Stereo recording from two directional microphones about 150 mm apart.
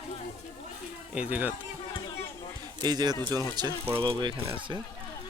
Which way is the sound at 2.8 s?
25° right (ahead or behind).